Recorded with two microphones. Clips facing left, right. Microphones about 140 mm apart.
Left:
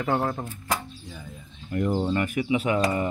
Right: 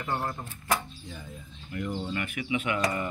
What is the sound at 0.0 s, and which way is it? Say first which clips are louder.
Speech: left 7 dB; 80° left.